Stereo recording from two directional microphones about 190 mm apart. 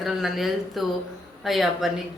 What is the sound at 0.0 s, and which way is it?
A man's voice, centre (ahead or behind).